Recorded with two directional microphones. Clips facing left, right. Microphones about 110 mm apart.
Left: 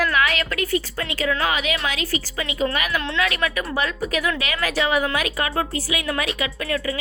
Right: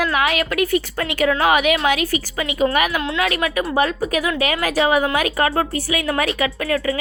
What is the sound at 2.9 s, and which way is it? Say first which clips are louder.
A woman's voice: right 3 dB; 30° right (ahead or behind).